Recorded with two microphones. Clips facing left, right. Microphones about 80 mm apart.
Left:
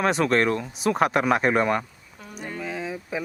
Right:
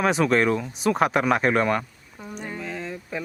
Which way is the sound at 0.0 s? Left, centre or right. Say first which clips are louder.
Right 1 dB; centre.